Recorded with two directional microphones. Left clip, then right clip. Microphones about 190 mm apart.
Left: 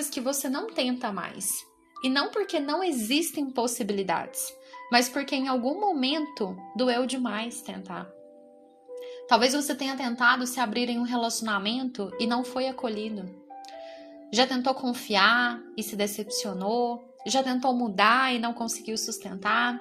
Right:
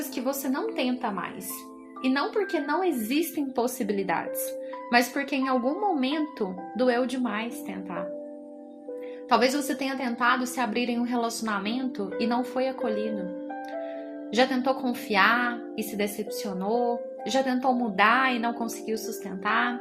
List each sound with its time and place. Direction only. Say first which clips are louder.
0.1 s a woman's voice: right 1 dB; 35° left (ahead or behind)
9.3 s a woman's voice: even; 25° left (ahead or behind)
14.3 s a woman's voice: right 1 dB; 25° left (ahead or behind)